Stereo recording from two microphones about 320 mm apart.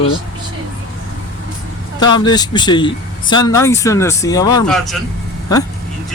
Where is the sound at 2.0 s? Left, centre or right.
Centre.